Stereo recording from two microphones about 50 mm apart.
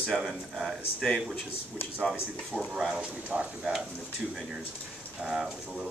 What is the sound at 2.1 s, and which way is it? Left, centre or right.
Speech, centre.